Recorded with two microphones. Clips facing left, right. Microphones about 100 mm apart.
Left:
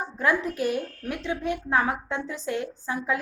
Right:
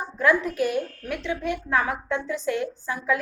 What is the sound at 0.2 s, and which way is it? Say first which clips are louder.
A woman's voice: right 3 dB; 30° left (ahead or behind).